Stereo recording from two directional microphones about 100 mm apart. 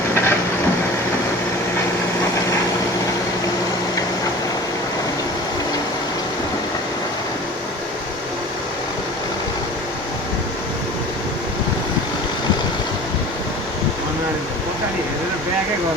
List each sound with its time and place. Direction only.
0.1 s vehicle: 25° left (ahead or behind)